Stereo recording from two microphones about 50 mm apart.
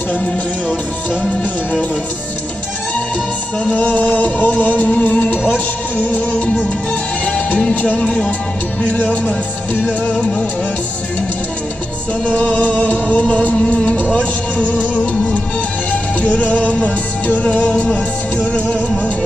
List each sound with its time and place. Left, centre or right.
3.6 s music: left
6.4 s music: left
7.9 s speech: centre
9.0 s music: left
12.3 s music: left